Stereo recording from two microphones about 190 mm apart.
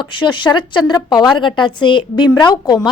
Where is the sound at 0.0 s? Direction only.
25° left (ahead or behind).